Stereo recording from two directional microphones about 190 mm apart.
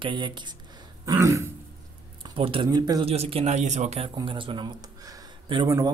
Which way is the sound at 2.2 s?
25° right (ahead or behind).